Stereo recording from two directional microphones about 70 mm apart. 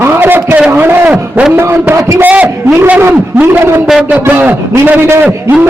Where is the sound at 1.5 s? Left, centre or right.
Right.